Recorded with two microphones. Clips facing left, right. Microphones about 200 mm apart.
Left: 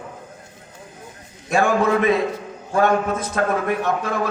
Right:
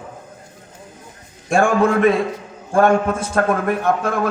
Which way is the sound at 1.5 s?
50° right (ahead or behind).